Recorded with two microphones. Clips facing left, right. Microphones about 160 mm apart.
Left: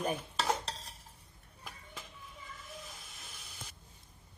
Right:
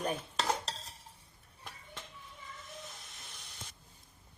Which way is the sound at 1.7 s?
Centre (ahead or behind).